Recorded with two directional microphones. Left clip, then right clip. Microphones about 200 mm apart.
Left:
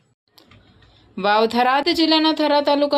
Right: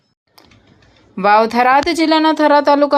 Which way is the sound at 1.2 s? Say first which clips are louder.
Right 6 dB; 15° right (ahead or behind).